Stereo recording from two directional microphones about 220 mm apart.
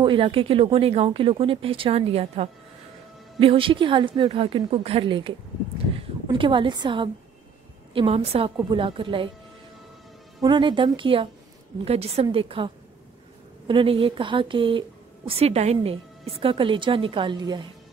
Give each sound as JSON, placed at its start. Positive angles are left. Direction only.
{"t": 0.0, "sound": "a woman's voice", "side_deg": -20}
{"t": 10.4, "sound": "a woman's voice", "side_deg": -20}